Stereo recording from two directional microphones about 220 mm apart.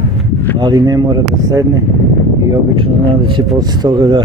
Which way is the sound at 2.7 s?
20° right (ahead or behind).